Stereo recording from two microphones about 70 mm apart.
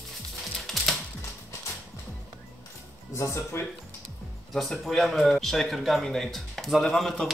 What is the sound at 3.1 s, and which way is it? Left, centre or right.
Speech, left.